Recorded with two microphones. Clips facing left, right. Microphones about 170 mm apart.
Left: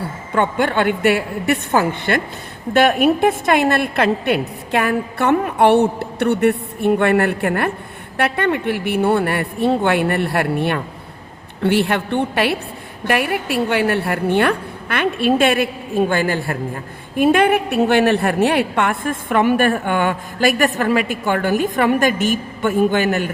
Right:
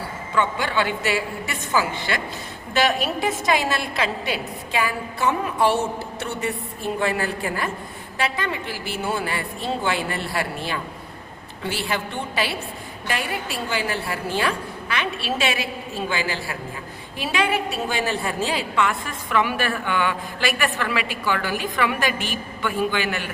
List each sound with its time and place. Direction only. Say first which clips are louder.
0.3 s a woman's voice: left 5 dB; 55° left (ahead or behind)